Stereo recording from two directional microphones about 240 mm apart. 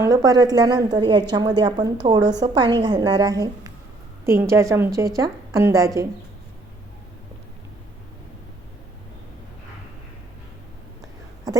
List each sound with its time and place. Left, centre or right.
0.0 s a woman's voice: centre